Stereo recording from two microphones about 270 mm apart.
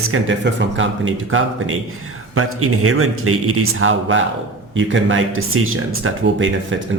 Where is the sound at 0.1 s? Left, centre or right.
Right.